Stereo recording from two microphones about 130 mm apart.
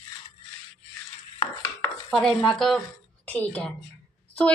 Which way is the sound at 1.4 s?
45° left (ahead or behind).